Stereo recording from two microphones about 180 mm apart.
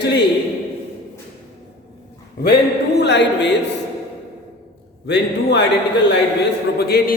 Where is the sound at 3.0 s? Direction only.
75° left (ahead or behind).